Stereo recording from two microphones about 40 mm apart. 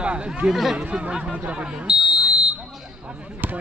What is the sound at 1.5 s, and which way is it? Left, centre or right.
Fire alarm, right.